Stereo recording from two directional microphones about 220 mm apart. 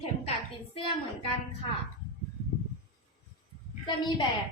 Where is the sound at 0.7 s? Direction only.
25° left (ahead or behind).